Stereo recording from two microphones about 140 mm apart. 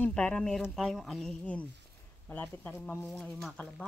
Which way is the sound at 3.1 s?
Centre (ahead or behind).